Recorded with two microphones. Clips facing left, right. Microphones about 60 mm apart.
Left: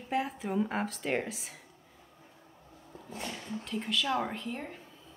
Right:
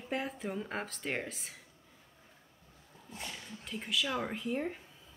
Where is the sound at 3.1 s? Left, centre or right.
Left.